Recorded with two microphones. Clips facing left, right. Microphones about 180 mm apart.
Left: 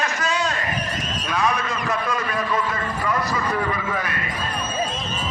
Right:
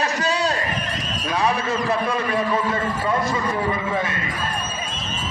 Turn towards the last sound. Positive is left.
turn(degrees=-25)  # may be behind; listen again after turning